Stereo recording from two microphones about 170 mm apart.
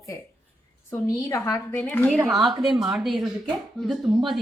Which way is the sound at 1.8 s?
5° left (ahead or behind).